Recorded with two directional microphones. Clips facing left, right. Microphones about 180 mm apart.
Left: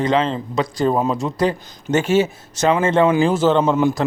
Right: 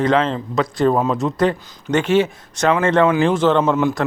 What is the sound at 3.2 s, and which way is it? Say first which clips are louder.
Speech: even; 5° left (ahead or behind).